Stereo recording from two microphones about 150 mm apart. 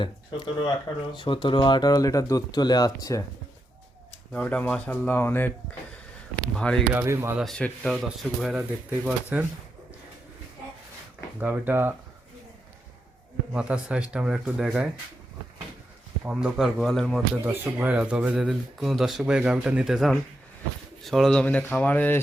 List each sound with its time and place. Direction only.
0.0 s speech: 30° left (ahead or behind)
4.3 s speech: 5° left (ahead or behind)
6.6 s speech: 5° left (ahead or behind)
6.9 s speech: 20° right (ahead or behind)
7.3 s speech: 5° left (ahead or behind)
8.9 s speech: 10° right (ahead or behind)
11.3 s speech: 10° right (ahead or behind)
13.5 s speech: 5° right (ahead or behind)
16.2 s speech: 5° right (ahead or behind)
17.4 s speech: 10° right (ahead or behind); by 22.2 s 10° left (ahead or behind)